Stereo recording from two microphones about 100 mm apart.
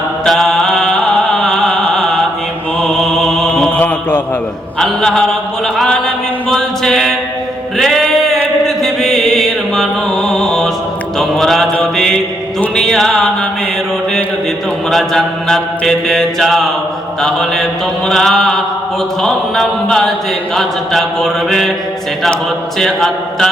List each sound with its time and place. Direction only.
0.3 s chant: 5° left (ahead or behind)
2.8 s music: 5° left (ahead or behind)
3.7 s mantra: 15° left (ahead or behind)
4.8 s mantra: 5° left (ahead or behind)
6.5 s music: 5° left (ahead or behind)
8.6 s chant: 5° left (ahead or behind)
11.2 s mantra: 5° left (ahead or behind)
14.8 s mantra: 5° left (ahead or behind)
22.8 s mantra: 5° left (ahead or behind)